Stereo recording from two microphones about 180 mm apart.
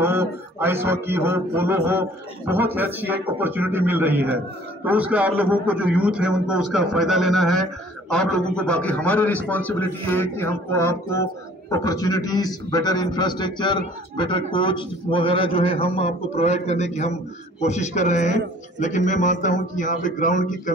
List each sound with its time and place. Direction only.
0.0 s a man's voice: 15° right (ahead or behind); by 20.7 s 45° left (ahead or behind)